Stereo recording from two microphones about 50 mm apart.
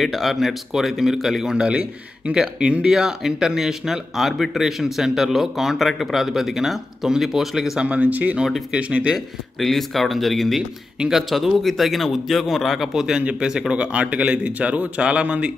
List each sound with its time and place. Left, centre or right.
0.0 s a man's voice: centre
1.5 s a man's voice: right
2.3 s speech: centre
7.8 s a man's voice: right
9.6 s a man's voice: centre
13.2 s a man's voice: right